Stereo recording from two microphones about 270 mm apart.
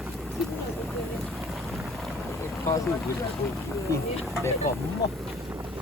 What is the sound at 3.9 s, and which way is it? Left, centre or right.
Speech, centre.